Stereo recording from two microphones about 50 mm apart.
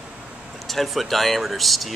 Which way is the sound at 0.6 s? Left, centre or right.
Centre.